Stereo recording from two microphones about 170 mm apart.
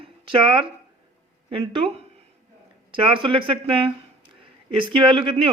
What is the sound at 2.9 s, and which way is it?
Speech, 30° right (ahead or behind).